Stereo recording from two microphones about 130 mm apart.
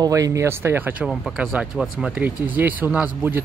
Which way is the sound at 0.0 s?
25° right (ahead or behind).